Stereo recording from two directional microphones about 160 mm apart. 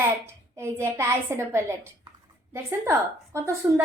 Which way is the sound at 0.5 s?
15° right (ahead or behind).